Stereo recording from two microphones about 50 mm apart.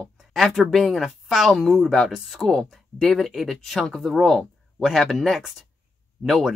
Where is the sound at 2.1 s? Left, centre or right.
Centre.